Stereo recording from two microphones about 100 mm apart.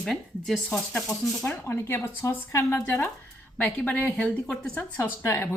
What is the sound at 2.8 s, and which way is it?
Speech, 15° left (ahead or behind).